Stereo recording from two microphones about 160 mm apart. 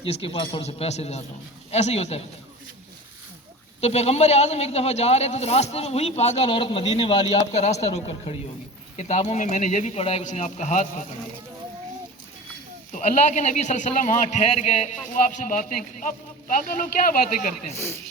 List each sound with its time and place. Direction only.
0.0 s speech: 35° left (ahead or behind)
3.8 s speech: 40° left (ahead or behind)
7.5 s a man's voice: 45° left (ahead or behind)
12.9 s a man's voice: 50° left (ahead or behind)